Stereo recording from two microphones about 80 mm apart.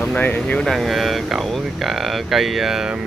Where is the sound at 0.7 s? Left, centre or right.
Centre.